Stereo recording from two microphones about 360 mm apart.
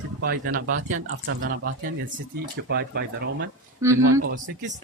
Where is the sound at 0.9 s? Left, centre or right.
Right.